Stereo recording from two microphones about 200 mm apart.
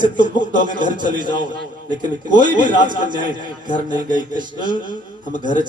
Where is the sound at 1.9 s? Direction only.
20° right (ahead or behind).